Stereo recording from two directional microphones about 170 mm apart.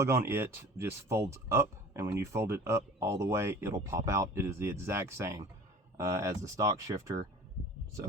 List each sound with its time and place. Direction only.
0.0 s speech: 15° right (ahead or behind)